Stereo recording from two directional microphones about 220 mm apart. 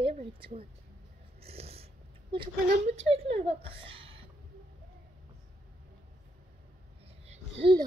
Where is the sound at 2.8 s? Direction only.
30° right (ahead or behind).